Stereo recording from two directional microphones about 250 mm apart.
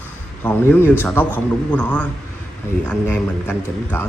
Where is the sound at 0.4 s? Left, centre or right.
Centre.